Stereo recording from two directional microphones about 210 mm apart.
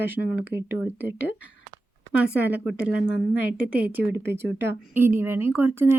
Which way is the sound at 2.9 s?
65° left (ahead or behind).